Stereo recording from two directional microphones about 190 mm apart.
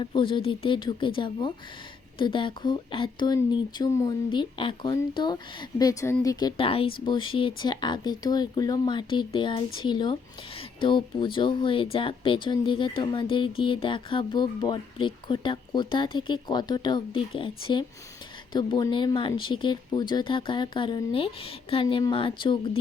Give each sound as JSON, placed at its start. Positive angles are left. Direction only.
{"t": 0.0, "sound": "speech", "side_deg": 25}